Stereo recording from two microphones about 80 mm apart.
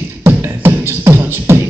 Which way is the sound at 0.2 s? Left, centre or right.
Right.